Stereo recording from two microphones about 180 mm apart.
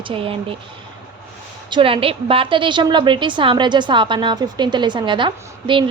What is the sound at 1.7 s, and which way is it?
A woman's voice, 30° right (ahead or behind).